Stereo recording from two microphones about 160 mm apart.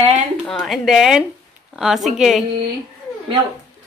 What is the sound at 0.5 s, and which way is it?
A woman's voice, centre (ahead or behind).